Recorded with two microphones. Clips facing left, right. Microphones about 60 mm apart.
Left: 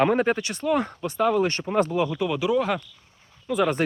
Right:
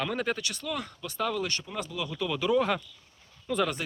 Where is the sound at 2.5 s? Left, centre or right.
Centre.